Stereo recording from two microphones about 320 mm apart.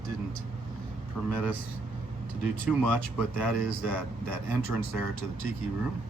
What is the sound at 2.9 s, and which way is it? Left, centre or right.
Speech, centre.